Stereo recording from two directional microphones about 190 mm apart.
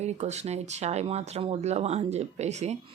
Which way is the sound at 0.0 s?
35° right (ahead or behind).